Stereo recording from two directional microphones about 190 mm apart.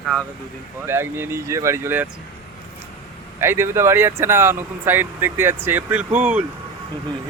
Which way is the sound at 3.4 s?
15° right (ahead or behind).